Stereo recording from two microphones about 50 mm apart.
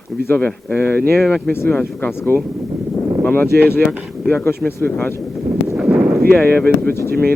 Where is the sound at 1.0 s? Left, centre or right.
Left.